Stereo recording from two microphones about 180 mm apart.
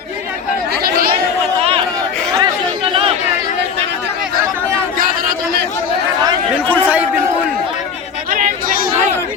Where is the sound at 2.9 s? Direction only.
30° right (ahead or behind).